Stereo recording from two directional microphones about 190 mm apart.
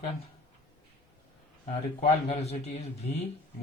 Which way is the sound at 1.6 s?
35° left (ahead or behind).